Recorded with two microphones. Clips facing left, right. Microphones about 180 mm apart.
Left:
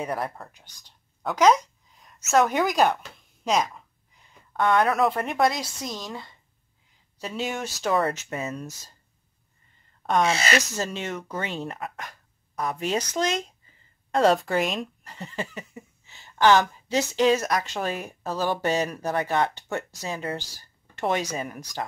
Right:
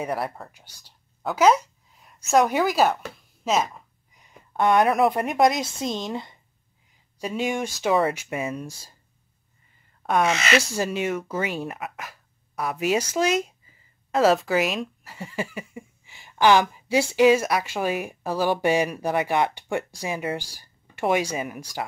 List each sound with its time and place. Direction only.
0.0 s speech: 5° right (ahead or behind)
4.2 s speech: 15° right (ahead or behind)
7.2 s speech: 10° right (ahead or behind)
10.2 s speech: 35° left (ahead or behind)
10.6 s speech: 10° right (ahead or behind)